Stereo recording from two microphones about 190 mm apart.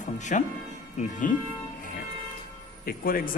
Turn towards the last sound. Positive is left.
turn(degrees=50)  # may be behind; listen again after turning